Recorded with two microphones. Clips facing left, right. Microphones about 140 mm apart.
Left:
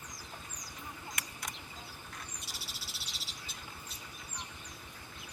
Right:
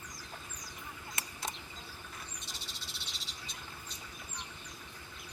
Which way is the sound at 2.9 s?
5° left (ahead or behind).